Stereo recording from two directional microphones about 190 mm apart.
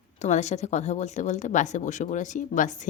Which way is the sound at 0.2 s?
35° left (ahead or behind).